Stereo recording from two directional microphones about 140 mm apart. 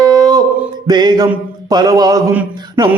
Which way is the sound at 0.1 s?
25° right (ahead or behind).